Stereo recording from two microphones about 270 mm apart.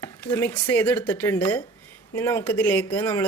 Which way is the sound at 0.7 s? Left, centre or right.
Centre.